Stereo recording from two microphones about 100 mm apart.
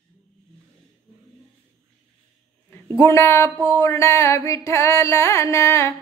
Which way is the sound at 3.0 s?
25° left (ahead or behind).